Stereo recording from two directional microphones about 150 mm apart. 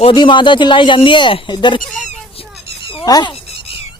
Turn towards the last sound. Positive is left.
turn(degrees=30)  # may be behind; listen again after turning